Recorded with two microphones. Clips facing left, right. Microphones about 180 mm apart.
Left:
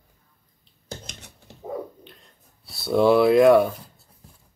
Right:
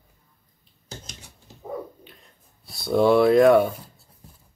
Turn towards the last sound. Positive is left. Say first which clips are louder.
# left 1 dB
turn(degrees=0)  # may be behind; listen again after turning